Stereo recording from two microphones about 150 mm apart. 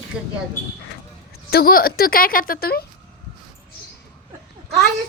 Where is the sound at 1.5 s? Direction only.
85° left.